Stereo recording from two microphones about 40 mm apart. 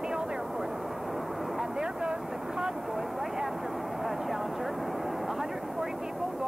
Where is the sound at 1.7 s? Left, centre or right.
Centre.